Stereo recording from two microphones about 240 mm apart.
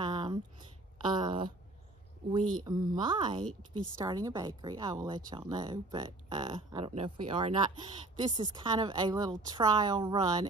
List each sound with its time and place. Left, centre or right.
0.0 s a sound: centre
1.0 s a woman's voice: centre
2.6 s a woman's voice: centre